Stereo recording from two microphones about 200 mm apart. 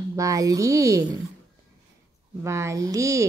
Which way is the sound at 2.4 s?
15° right (ahead or behind).